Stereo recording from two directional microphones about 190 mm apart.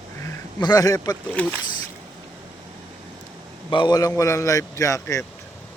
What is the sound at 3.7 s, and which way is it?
A man's voice, 25° left (ahead or behind).